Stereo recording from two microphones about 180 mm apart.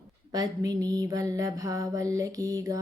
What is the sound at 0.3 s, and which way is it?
Mantra, 20° right (ahead or behind).